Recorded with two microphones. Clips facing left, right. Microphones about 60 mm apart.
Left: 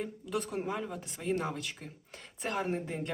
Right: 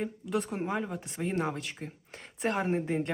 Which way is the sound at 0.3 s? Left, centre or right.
Centre.